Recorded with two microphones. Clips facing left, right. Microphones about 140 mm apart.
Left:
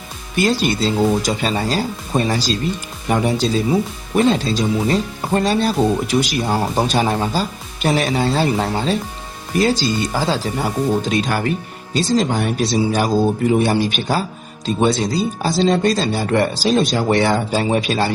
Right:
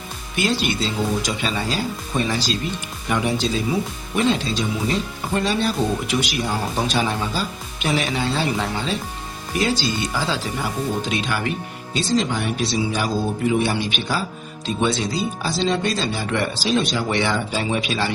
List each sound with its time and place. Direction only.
0.3 s speech: 40° left (ahead or behind)